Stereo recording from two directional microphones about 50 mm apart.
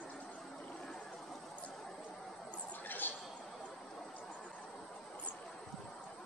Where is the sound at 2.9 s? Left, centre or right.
Left.